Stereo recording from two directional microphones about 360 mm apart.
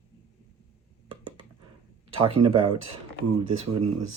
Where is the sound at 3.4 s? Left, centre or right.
Right.